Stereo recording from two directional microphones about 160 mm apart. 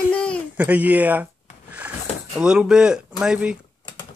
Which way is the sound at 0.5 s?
10° right (ahead or behind).